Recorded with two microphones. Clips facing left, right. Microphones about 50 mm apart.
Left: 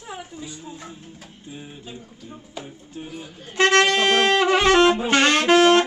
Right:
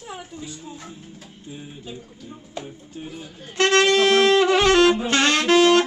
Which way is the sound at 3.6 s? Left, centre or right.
Left.